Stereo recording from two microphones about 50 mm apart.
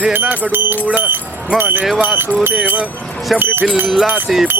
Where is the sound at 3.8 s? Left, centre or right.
Centre.